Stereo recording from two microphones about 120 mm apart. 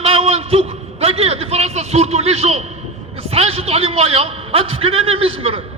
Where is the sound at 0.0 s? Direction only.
55° right (ahead or behind).